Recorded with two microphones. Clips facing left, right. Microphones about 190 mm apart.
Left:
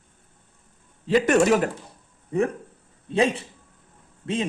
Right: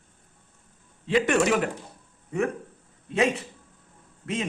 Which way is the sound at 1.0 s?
40° left (ahead or behind).